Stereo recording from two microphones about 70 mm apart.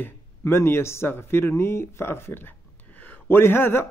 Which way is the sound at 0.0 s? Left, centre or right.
Left.